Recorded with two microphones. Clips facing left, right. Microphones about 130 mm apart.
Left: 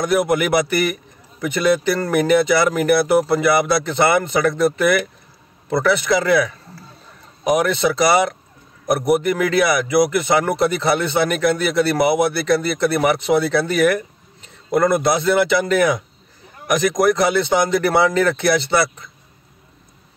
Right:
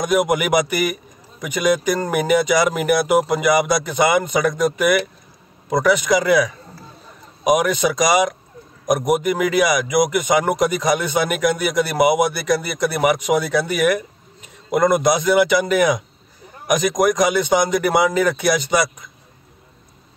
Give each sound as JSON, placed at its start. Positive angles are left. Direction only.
{"t": 0.0, "sound": "a man's voice", "side_deg": -15}